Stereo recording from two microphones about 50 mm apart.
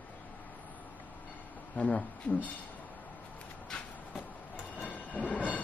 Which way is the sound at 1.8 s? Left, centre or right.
Left.